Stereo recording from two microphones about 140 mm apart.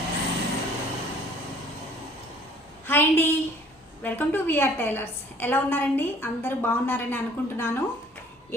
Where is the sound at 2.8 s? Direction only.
15° left (ahead or behind).